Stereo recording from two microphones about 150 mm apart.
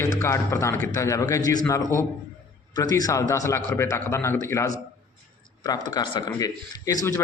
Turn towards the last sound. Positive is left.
turn(degrees=25)  # may be behind; listen again after turning